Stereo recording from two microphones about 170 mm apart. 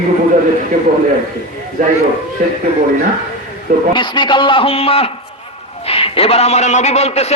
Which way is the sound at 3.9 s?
30° left (ahead or behind).